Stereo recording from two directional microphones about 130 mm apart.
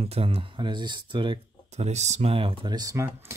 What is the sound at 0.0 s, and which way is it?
Speech, 50° right (ahead or behind).